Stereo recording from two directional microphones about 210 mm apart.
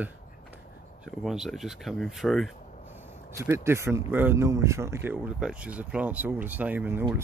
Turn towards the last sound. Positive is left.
turn(degrees=-10)  # may be behind; listen again after turning